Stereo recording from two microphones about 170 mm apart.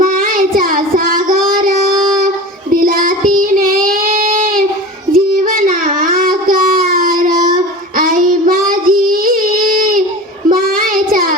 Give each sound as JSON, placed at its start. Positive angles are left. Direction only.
{"t": 0.0, "sound": "child singing", "side_deg": -55}